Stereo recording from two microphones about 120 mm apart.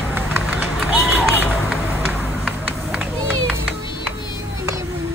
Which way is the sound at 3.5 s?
15° right (ahead or behind).